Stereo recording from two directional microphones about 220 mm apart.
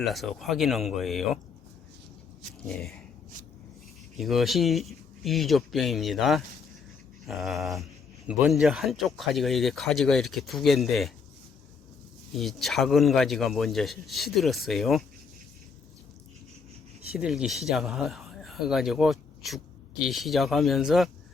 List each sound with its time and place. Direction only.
0.0 s speech: centre (ahead or behind)
2.6 s speech: centre (ahead or behind)
4.2 s speech: centre (ahead or behind)
12.3 s speech: centre (ahead or behind)
17.2 s speech: centre (ahead or behind)